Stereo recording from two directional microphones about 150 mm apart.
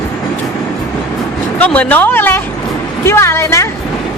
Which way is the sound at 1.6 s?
10° left (ahead or behind).